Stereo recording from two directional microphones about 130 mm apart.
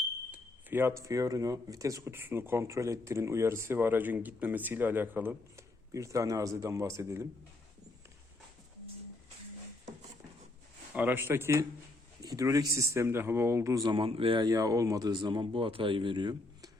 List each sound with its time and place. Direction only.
0.3 s speech: 15° right (ahead or behind)
10.9 s speech: 15° right (ahead or behind)
13.8 s speech: 45° right (ahead or behind)